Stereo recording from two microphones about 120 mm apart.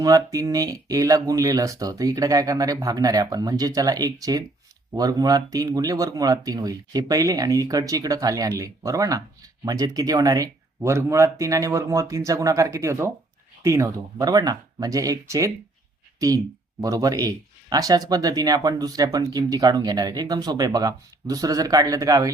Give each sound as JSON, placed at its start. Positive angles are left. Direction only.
{"t": 0.0, "sound": "speech", "side_deg": -30}